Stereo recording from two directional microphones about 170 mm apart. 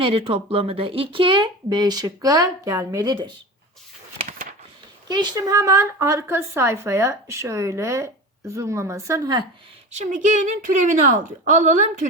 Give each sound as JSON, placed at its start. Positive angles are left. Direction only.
{"t": 0.0, "sound": "speech", "side_deg": -35}
{"t": 5.0, "sound": "a woman's voice", "side_deg": -25}
{"t": 9.9, "sound": "a woman's voice", "side_deg": -45}